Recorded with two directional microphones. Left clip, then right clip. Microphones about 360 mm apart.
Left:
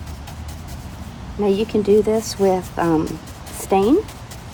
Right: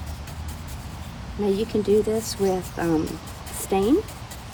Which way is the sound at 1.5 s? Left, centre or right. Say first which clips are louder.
Left 5 dB; centre.